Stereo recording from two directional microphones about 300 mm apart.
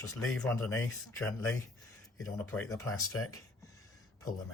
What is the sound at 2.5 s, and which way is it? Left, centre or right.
Speech, centre.